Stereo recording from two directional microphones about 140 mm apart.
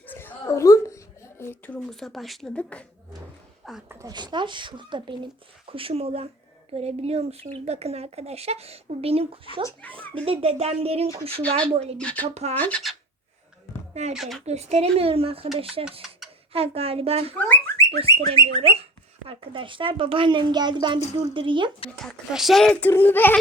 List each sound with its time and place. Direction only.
0.0 s a sound: 15° left (ahead or behind)
3.8 s speech: 20° right (ahead or behind)
4.1 s speech: 30° right (ahead or behind); by 11.9 s 50° right (ahead or behind)
11.9 s speech: 10° left (ahead or behind)
12.3 s speech: 50° right (ahead or behind)
12.5 s speech: 10° left (ahead or behind)
14.1 s speech: centre (ahead or behind)
14.4 s speech: 50° right (ahead or behind)
15.8 s stir: 5° right (ahead or behind)
16.5 s speech: 45° right (ahead or behind)
17.3 s a sound: 10° left (ahead or behind)
18.3 s speech: 45° right (ahead or behind)
22.3 s speech: centre (ahead or behind)